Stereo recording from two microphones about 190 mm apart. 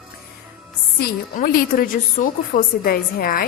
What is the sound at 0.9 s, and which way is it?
A woman's voice, 50° left (ahead or behind).